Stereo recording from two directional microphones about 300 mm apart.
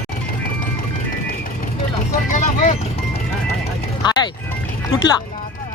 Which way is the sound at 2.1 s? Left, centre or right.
Left.